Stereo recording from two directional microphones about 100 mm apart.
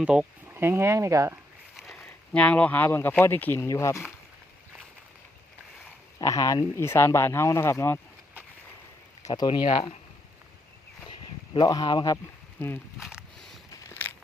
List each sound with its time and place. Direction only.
0.0 s speech: 10° right (ahead or behind)
0.5 s speech: 25° right (ahead or behind)
1.9 s speech: 10° left (ahead or behind); by 4.0 s 30° left (ahead or behind)
6.2 s speech: 35° left (ahead or behind)
9.3 s speech: 50° left (ahead or behind)
11.6 s speech: 45° left (ahead or behind)
12.1 s speech: 20° left (ahead or behind)
13.0 s speech: 10° right (ahead or behind)
13.9 s crumpling: 20° left (ahead or behind)